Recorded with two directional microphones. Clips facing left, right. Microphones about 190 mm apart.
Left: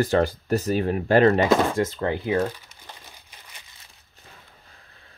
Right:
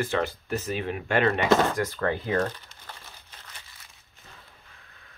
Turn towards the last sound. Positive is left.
turn(degrees=15)  # may be behind; listen again after turning